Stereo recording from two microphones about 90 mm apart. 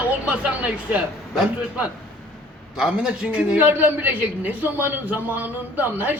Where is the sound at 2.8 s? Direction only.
10° right (ahead or behind).